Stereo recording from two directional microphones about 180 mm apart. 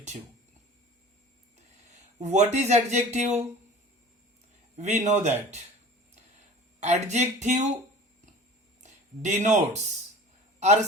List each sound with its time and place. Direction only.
2.2 s speech: 40° right (ahead or behind)
4.8 s speech: 40° right (ahead or behind)
6.7 s speech: 40° right (ahead or behind)
8.8 s a man's voice: 40° right (ahead or behind)